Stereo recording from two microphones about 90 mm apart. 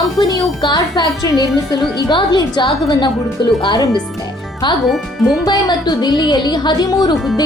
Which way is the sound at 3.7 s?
45° left (ahead or behind).